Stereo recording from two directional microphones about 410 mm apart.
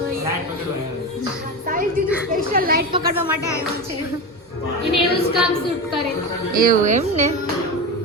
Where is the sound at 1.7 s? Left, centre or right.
Centre.